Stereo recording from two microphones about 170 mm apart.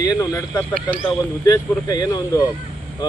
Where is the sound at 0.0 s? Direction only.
20° left (ahead or behind).